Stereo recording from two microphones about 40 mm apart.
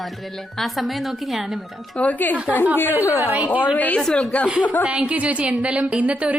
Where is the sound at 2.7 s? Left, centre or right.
Left.